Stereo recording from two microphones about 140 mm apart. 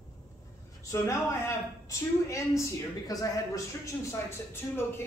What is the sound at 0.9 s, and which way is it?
A man's voice, 20° left (ahead or behind).